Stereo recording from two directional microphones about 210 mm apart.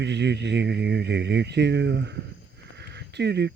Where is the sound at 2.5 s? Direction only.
55° right (ahead or behind).